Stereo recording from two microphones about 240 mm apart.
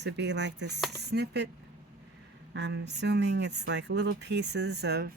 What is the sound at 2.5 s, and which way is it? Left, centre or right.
Speech, right.